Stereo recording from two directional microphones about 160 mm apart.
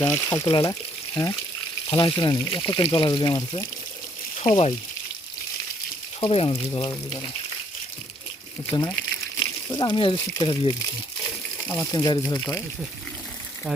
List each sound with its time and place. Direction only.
0.1 s speech: 20° left (ahead or behind)
1.9 s speech: 30° left (ahead or behind)
6.1 s speech: 35° left (ahead or behind)
9.4 s speech: 30° left (ahead or behind)
11.2 s a sound: 15° left (ahead or behind)
11.9 s speech: 25° left (ahead or behind)